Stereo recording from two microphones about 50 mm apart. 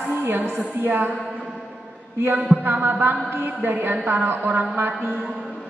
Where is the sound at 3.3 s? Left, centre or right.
Right.